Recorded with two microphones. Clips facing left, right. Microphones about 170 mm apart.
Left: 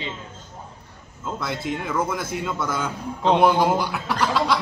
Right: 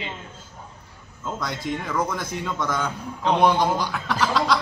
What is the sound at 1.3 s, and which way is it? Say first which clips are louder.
Speech: left 1 dB; 5° left (ahead or behind).